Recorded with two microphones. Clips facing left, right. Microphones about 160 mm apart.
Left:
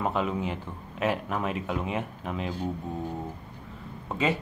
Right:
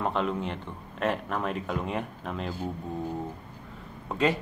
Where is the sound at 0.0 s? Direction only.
5° left (ahead or behind).